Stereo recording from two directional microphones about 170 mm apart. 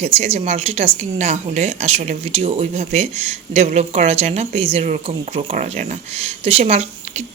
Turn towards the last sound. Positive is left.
turn(degrees=-40)  # may be behind; listen again after turning